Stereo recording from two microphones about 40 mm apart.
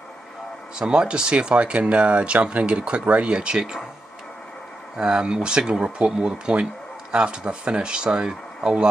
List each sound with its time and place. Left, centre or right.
0.7 s speech: right
4.9 s speech: centre